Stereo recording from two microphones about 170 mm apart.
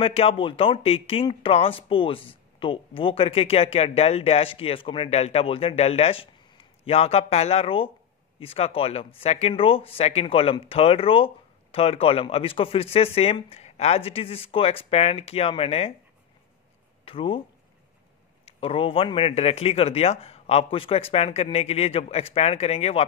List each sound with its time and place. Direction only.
0.0 s speech: 35° left (ahead or behind)
17.0 s speech: 30° left (ahead or behind)
18.4 s speech: 35° left (ahead or behind)